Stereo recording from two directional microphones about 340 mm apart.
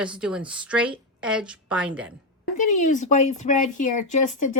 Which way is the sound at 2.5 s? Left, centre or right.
Left.